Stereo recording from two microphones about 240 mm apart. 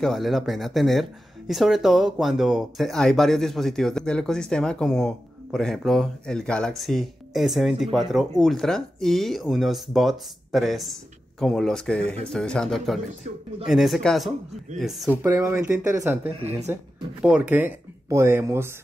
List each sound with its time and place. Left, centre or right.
0.0 s speech: centre
15.2 s speech: centre
16.3 s speech: right
17.2 s speech: centre